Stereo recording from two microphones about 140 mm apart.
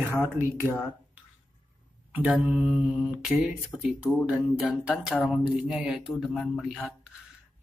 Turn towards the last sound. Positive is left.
turn(degrees=0)  # may be behind; listen again after turning